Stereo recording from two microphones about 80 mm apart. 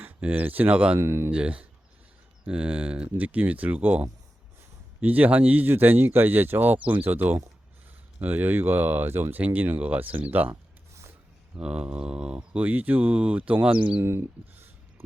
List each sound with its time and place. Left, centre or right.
0.0 s speech: centre
0.9 s speech: right
1.3 s speech: centre
10.5 s a sound: right
11.6 s speech: centre
14.0 s a sound: right